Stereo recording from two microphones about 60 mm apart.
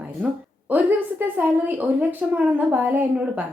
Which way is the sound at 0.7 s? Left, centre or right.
Right.